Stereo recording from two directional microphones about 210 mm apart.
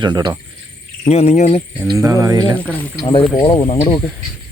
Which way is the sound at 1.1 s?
30° left (ahead or behind).